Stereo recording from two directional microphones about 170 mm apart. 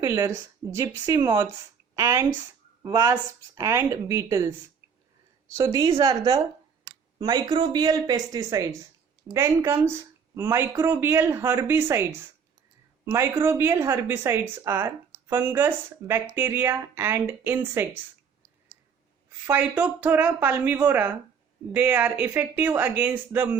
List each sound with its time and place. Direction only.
0.0 s speech: 20° right (ahead or behind)
5.5 s speech: 20° right (ahead or behind)
13.1 s speech: 15° right (ahead or behind)
19.5 s speech: 10° right (ahead or behind)